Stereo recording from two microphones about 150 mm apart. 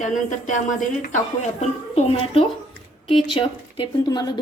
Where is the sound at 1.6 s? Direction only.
45° left (ahead or behind).